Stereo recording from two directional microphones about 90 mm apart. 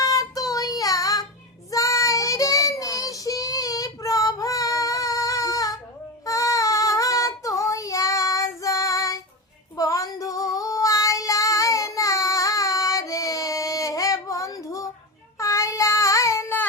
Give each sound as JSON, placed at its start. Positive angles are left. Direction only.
{"t": 0.0, "sound": "child singing", "side_deg": 40}